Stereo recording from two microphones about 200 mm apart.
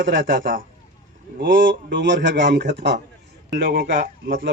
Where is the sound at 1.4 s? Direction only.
65° right (ahead or behind); by 4.4 s 45° right (ahead or behind).